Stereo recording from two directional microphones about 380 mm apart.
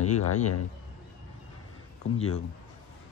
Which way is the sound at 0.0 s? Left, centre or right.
Left.